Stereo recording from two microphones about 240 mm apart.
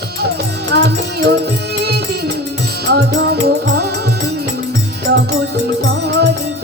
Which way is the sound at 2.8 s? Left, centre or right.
Right.